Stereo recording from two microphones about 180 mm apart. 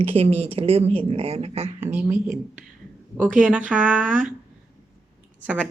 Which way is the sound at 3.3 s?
5° right (ahead or behind).